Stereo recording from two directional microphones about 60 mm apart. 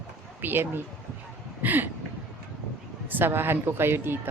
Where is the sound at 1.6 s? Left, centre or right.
Right.